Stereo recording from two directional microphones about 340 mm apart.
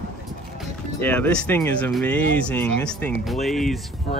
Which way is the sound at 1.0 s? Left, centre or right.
Centre.